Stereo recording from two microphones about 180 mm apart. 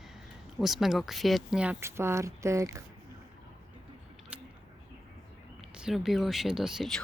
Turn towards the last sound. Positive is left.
turn(degrees=0)  # may be behind; listen again after turning